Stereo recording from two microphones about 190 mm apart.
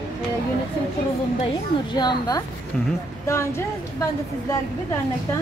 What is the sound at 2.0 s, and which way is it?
A woman's voice, 20° left (ahead or behind).